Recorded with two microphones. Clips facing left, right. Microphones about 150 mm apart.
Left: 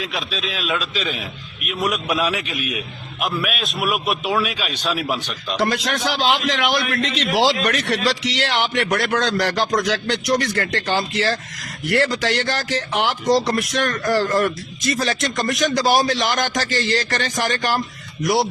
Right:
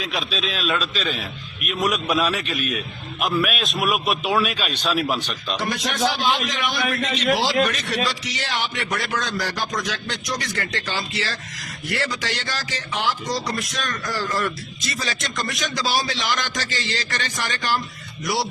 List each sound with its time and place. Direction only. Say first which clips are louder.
0.0 s a man's voice: even; centre (ahead or behind)
5.5 s speech: left 6 dB; 70° left (ahead or behind)
6.1 s a man's voice: left 5 dB; 90° left; by 7.3 s 70° left (ahead or behind)
7.3 s a man's voice: left 3 dB; 85° left; by 18.4 s 50° left (ahead or behind)